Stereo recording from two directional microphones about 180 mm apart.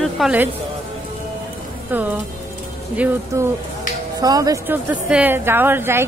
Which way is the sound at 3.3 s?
15° right (ahead or behind).